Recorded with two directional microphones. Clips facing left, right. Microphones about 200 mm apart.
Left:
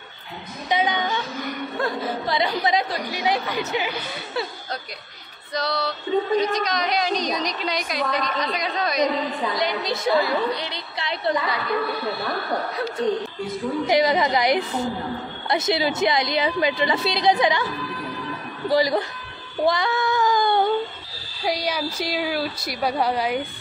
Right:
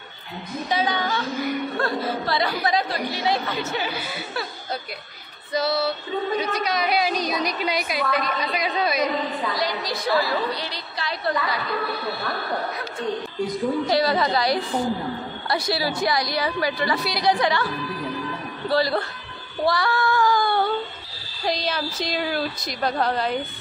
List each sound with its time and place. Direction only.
0.7 s a woman's voice: 20° left (ahead or behind)
5.5 s female singing: 5° right (ahead or behind)
6.4 s a woman's voice: 5° right (ahead or behind)
9.4 s a woman's voice: 20° left (ahead or behind)
13.8 s a woman's voice: 15° left (ahead or behind)
18.7 s a woman's voice: 15° left (ahead or behind)
19.6 s child singing: 20° left (ahead or behind)
21.5 s a woman's voice: 10° left (ahead or behind)